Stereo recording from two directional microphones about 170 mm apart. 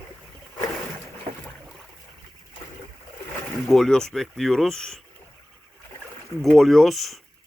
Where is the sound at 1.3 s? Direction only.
55° right (ahead or behind).